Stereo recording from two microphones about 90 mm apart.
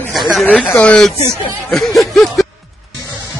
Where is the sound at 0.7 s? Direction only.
15° left (ahead or behind).